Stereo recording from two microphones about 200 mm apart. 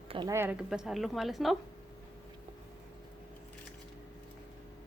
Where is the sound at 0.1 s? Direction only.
20° right (ahead or behind); by 1.5 s centre (ahead or behind).